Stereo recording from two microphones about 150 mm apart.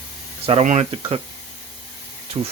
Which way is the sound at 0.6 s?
50° right (ahead or behind).